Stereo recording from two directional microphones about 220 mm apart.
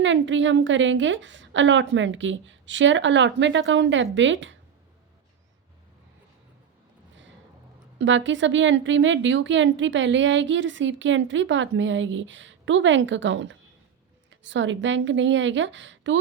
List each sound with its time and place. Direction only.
0.0 s a woman's voice: 60° right (ahead or behind)
7.9 s a woman's voice: 55° right (ahead or behind)